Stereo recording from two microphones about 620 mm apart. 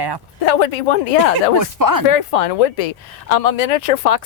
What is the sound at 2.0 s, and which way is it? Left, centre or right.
A woman's voice, left.